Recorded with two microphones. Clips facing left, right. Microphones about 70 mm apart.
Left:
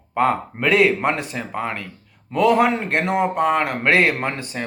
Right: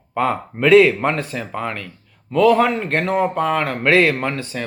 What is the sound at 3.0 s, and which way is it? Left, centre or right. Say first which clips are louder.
A man's voice: even; centre.